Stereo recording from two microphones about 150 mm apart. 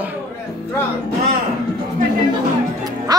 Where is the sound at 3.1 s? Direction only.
25° right (ahead or behind).